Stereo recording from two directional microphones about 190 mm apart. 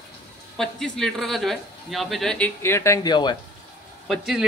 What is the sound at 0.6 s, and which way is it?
A man's voice, 5° left (ahead or behind).